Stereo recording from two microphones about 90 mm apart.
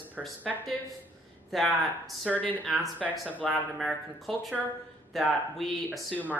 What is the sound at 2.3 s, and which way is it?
Speech, 15° left (ahead or behind).